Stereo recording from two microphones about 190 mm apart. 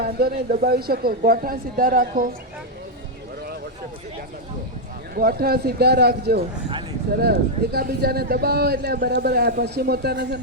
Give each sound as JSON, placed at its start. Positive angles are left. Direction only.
{"t": 0.0, "sound": "a man's voice", "side_deg": -55}
{"t": 5.1, "sound": "a man's voice", "side_deg": -50}